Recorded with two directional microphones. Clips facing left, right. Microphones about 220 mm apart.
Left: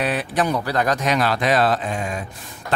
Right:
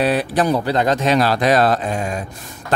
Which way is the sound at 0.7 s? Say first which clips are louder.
Right 4 dB; 25° right (ahead or behind).